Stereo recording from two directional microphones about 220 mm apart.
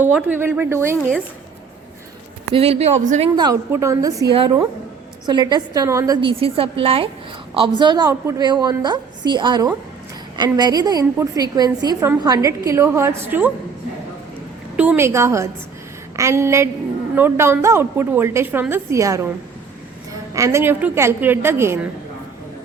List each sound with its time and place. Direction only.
0.0 s a woman's voice: 5° right (ahead or behind)
2.5 s a woman's voice: 25° right (ahead or behind)
3.3 s a woman's voice: 15° right (ahead or behind)
14.8 s a woman's voice: 10° right (ahead or behind)
20.3 s a woman's voice: 15° right (ahead or behind)